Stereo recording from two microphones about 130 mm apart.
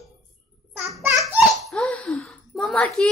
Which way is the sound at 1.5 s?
5° left (ahead or behind).